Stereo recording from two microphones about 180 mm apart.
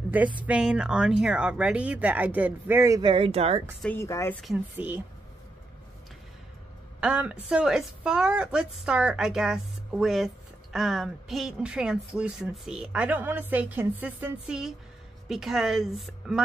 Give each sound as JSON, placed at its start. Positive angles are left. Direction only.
{"t": 0.4, "sound": "speech", "side_deg": -5}
{"t": 3.8, "sound": "speech", "side_deg": 15}
{"t": 4.4, "sound": "speech", "side_deg": -5}
{"t": 7.0, "sound": "a woman's voice", "side_deg": -5}